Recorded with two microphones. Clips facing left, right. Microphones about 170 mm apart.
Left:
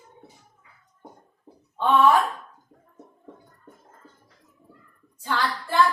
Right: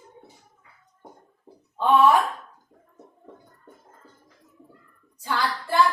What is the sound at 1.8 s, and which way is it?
Speech, 10° right (ahead or behind).